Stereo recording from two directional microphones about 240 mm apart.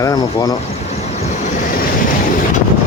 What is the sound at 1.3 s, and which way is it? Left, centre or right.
Vehicle, left.